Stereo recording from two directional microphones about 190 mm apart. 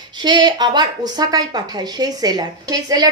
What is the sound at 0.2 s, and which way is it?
A woman's voice, 20° right (ahead or behind).